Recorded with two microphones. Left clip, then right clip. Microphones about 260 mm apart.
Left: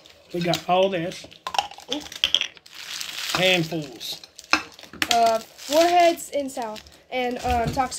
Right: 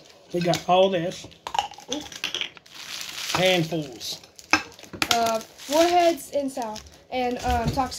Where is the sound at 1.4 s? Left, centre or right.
Left.